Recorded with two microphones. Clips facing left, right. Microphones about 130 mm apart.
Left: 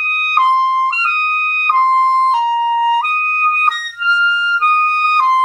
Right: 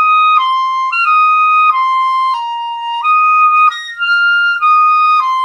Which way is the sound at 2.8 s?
45° left (ahead or behind).